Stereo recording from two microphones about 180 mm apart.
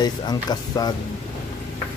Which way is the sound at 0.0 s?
20° left (ahead or behind).